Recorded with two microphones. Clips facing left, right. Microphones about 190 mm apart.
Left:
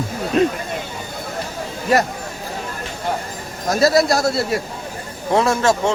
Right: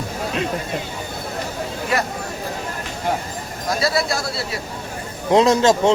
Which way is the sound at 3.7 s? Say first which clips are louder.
Left 6 dB; 45° left (ahead or behind).